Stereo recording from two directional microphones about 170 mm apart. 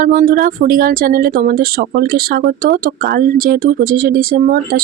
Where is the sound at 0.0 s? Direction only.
50° right (ahead or behind).